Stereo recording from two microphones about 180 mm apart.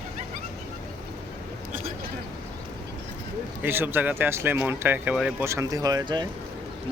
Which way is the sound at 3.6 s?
10° right (ahead or behind).